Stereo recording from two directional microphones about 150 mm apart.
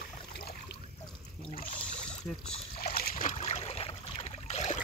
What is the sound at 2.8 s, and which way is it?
Boat, 75° left (ahead or behind).